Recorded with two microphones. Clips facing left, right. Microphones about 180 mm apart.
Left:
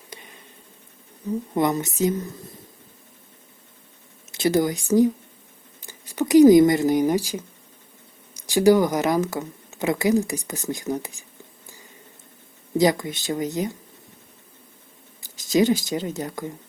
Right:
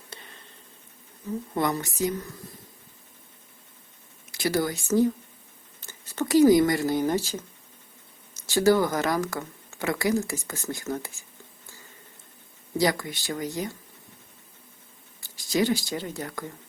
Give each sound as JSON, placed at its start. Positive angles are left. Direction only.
{"t": 0.1, "sound": "a sound", "side_deg": 10}
{"t": 1.5, "sound": "speech", "side_deg": 20}
{"t": 4.3, "sound": "speech", "side_deg": 20}
{"t": 15.5, "sound": "speech", "side_deg": 20}